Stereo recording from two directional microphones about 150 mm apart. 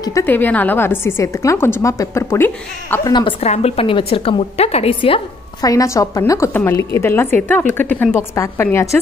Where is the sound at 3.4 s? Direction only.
45° left (ahead or behind).